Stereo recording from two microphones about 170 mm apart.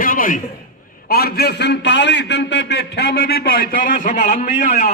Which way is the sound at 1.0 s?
65° left (ahead or behind).